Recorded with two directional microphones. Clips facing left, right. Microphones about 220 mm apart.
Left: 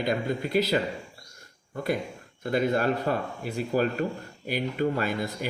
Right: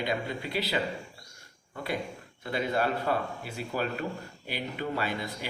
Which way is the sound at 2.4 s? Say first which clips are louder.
Left 5 dB; 45° left (ahead or behind).